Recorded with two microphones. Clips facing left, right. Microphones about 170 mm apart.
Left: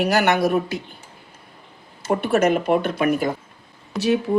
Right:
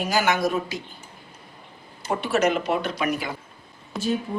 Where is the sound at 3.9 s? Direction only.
75° left (ahead or behind).